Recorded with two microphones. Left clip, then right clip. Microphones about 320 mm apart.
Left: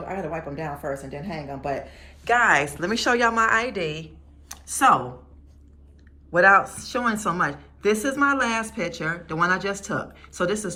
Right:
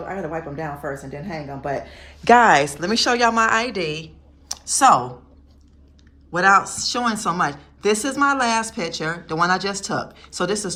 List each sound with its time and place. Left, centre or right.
0.1 s a woman's voice: centre
2.0 s speech: right
2.3 s a woman's voice: centre
4.4 s computer keyboard: centre
6.3 s a woman's voice: centre